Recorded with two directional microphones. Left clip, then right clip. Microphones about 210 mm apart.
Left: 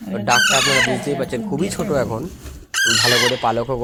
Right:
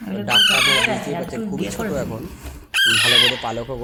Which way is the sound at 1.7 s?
10° left (ahead or behind).